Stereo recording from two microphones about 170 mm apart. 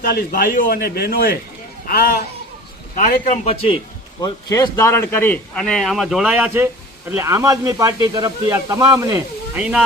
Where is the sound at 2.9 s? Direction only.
40° left (ahead or behind).